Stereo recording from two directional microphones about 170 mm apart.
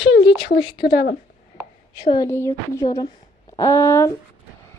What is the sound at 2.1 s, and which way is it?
Speech, 20° left (ahead or behind).